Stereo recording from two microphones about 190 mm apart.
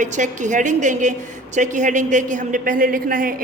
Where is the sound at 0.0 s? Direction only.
40° right (ahead or behind).